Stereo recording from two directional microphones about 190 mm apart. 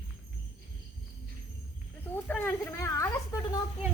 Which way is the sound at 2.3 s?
10° left (ahead or behind).